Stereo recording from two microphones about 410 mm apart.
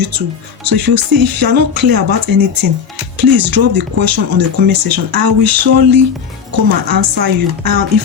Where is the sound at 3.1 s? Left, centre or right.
Right.